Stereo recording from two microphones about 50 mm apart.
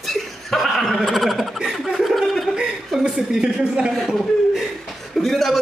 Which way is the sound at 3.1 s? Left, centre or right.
Centre.